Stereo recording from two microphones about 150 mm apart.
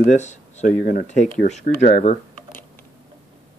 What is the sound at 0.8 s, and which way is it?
Speech, 75° left (ahead or behind).